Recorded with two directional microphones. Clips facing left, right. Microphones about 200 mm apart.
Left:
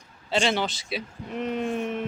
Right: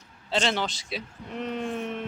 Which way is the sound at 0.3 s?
5° left (ahead or behind).